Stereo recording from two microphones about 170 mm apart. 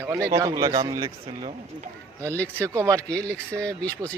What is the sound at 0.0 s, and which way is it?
Speech, 20° right (ahead or behind).